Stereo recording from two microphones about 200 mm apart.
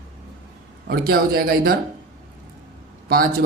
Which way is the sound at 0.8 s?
50° right (ahead or behind).